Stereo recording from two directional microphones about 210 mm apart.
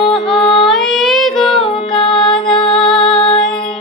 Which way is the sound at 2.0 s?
25° left (ahead or behind).